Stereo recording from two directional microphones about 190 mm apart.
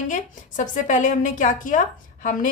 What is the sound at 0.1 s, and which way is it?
A woman's voice, 40° left (ahead or behind).